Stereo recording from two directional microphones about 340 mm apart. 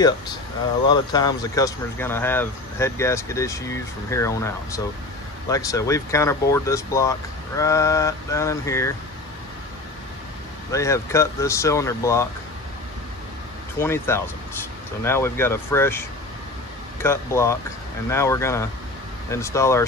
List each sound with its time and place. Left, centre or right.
0.8 s speech: centre
10.7 s speech: centre
13.7 s speech: centre